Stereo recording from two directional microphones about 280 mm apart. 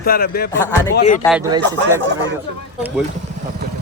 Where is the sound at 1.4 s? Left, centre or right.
Centre.